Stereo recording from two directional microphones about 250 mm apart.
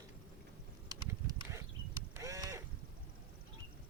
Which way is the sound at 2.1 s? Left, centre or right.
Centre.